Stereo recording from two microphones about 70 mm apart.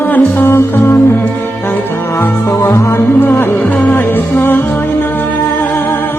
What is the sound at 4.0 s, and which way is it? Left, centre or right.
Music, left.